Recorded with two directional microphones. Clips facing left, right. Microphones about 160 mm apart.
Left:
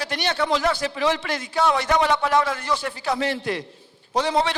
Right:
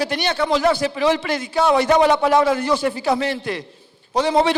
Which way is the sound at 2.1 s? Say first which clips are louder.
Right 5 dB; 10° right (ahead or behind).